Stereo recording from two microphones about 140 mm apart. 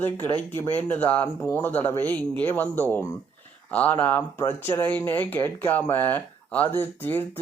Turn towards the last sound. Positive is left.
turn(degrees=15)  # may be behind; listen again after turning